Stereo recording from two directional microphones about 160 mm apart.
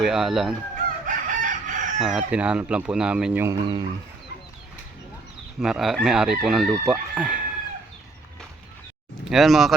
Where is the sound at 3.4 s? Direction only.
25° right (ahead or behind).